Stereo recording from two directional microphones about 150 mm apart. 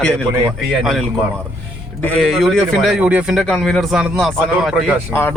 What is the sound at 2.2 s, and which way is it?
Speech, centre (ahead or behind).